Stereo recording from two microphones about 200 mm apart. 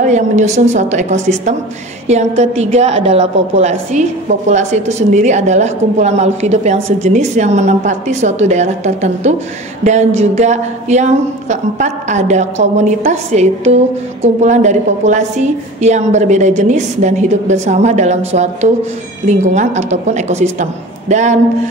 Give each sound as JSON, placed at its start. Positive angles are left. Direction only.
{"t": 0.0, "sound": "a woman's voice", "side_deg": -35}